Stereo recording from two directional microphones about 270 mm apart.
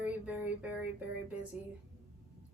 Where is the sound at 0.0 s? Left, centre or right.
Centre.